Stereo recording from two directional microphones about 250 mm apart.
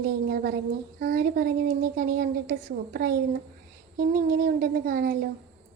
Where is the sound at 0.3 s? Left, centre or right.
Right.